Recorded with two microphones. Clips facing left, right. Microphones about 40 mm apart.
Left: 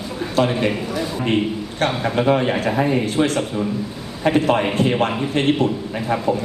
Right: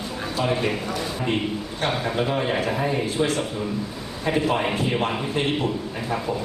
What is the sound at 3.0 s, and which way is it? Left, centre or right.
A man's voice, left.